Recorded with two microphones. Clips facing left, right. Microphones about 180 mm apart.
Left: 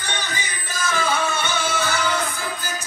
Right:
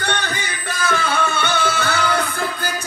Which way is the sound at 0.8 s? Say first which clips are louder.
Right 2 dB; 60° right (ahead or behind).